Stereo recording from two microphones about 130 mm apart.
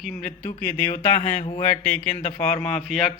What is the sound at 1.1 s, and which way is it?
Speech, 65° left (ahead or behind).